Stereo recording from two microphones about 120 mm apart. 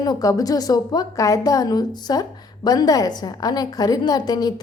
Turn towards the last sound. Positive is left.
turn(degrees=35)  # may be behind; listen again after turning